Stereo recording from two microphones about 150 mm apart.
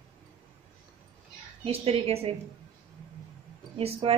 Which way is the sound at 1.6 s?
40° right (ahead or behind).